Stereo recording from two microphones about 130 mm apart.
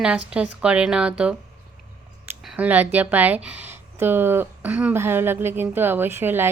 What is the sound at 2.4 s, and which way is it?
Speech, 5° right (ahead or behind).